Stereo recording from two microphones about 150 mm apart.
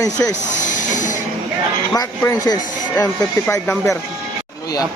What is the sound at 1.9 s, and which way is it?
Speech, 25° left (ahead or behind).